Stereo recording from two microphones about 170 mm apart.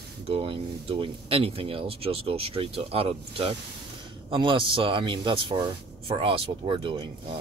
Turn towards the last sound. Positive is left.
turn(degrees=-30)  # may be behind; listen again after turning